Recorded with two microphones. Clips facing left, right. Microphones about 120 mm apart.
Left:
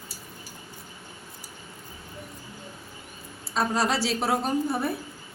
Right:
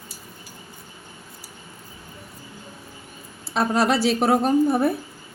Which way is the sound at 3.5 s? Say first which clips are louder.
Right 5 dB; 60° right (ahead or behind).